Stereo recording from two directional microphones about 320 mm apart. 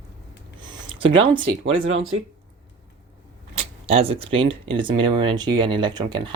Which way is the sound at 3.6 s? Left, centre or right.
Centre.